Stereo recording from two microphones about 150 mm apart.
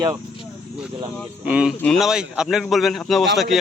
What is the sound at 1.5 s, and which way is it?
A man's voice, 5° right (ahead or behind).